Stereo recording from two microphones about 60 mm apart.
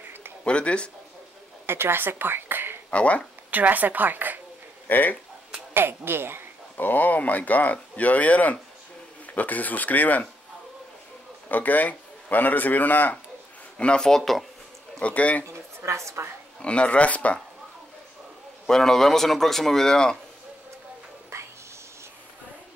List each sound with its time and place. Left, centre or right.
0.4 s a man's voice: centre
1.7 s a woman's voice: right
2.9 s speech: centre
3.4 s a woman's voice: right
4.8 s speech: left
5.7 s speech: right
6.8 s speech: left
11.4 s speech: left
13.7 s a man's voice: centre
15.0 s speech: left
15.4 s a woman's voice: right
16.6 s speech: centre
18.7 s a man's voice: centre
21.3 s a sound: right